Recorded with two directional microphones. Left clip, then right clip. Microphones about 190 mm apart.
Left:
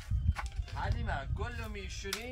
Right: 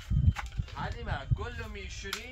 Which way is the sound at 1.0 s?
50° left (ahead or behind).